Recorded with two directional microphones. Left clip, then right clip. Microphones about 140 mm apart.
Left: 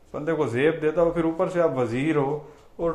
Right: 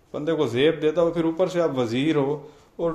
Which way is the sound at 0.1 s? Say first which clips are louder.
Right 1 dB; 30° right (ahead or behind).